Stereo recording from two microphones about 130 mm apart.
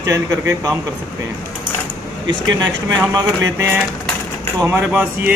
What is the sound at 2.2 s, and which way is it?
Speech, 30° right (ahead or behind).